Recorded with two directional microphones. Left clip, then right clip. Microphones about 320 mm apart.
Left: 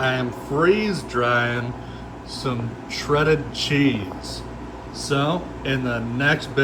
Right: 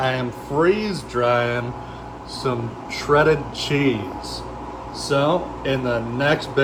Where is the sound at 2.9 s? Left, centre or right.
Centre.